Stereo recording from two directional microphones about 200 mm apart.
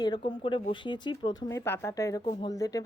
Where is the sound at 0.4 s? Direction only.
25° left (ahead or behind).